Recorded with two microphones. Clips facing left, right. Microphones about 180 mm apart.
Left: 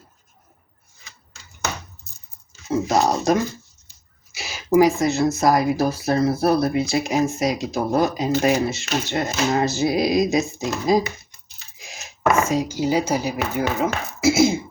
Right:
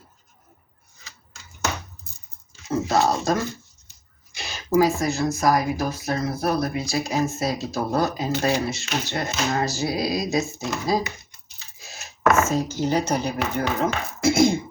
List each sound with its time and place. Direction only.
2.8 s speech: 20° left (ahead or behind)
4.3 s a sound: 5° left (ahead or behind)
4.8 s speech: 20° left (ahead or behind); by 14.6 s 5° left (ahead or behind)